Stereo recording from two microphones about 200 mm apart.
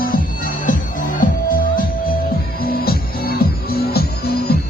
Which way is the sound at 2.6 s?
50° left (ahead or behind).